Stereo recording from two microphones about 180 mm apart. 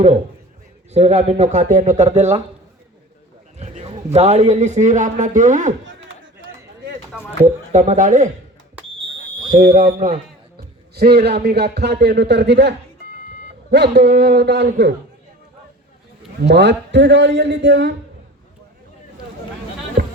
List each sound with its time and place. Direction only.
0.9 s a man's voice: 35° right (ahead or behind)
3.6 s a man's voice: 35° right (ahead or behind)
7.4 s speech: 40° right (ahead or behind)
9.5 s speech: 50° right (ahead or behind)
10.6 s a man's voice: 60° right (ahead or behind)
16.4 s a man's voice: 75° right (ahead or behind)
20.0 s music: 60° right (ahead or behind)